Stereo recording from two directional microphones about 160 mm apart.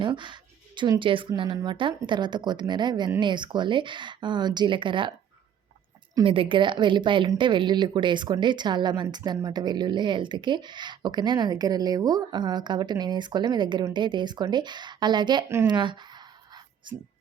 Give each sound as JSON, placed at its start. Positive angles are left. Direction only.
{"t": 0.0, "sound": "a woman's voice", "side_deg": -30}
{"t": 6.2, "sound": "speech", "side_deg": -35}